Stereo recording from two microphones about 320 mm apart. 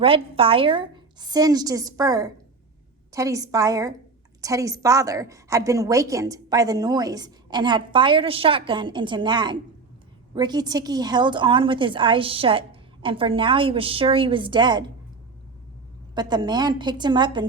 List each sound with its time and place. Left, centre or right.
0.0 s a woman's voice: centre
16.1 s a woman's voice: centre